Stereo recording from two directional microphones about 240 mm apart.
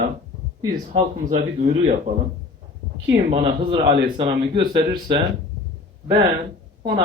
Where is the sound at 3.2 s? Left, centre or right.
Right.